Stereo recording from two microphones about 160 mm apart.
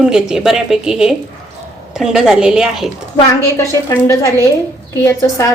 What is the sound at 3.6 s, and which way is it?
A woman's voice, 20° left (ahead or behind).